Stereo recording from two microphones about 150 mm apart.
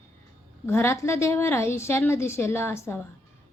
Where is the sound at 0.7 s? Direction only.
15° left (ahead or behind).